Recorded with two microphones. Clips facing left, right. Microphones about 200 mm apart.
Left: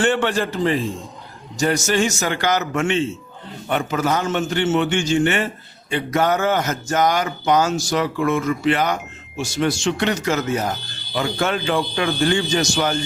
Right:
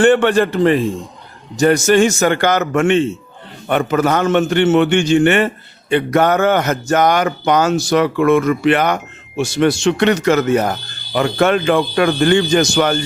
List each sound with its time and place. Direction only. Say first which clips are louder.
0.0 s speech: right 8 dB; 55° right (ahead or behind)